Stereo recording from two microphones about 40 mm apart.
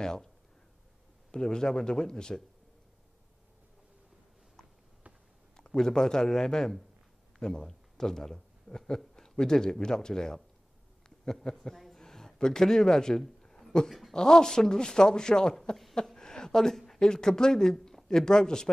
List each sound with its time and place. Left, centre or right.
0.0 s speech: centre
1.3 s speech: centre
5.8 s a man's voice: centre
11.4 s a man's voice: centre
13.2 s a sound: centre
14.1 s speech: centre
16.2 s a sound: centre
17.0 s speech: centre